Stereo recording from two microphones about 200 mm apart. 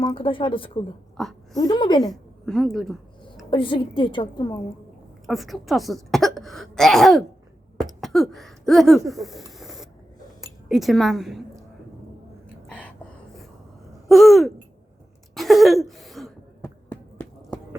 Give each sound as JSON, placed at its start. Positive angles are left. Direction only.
{"t": 0.0, "sound": "a woman's voice", "side_deg": 25}
{"t": 1.1, "sound": "speech", "side_deg": 0}
{"t": 1.5, "sound": "a woman's voice", "side_deg": 20}
{"t": 2.0, "sound": "a woman's voice", "side_deg": 0}
{"t": 3.5, "sound": "a woman's voice", "side_deg": 25}
{"t": 5.2, "sound": "speech", "side_deg": 0}
{"t": 7.8, "sound": "a sound", "side_deg": 0}
{"t": 10.4, "sound": "speech", "side_deg": 0}
{"t": 12.6, "sound": "gasp", "side_deg": 5}
{"t": 14.1, "sound": "speech", "side_deg": 0}
{"t": 15.4, "sound": "a sound", "side_deg": 0}
{"t": 16.6, "sound": "a sound", "side_deg": 10}